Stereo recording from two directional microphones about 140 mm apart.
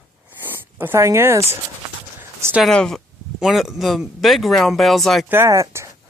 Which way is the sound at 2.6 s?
5° left (ahead or behind).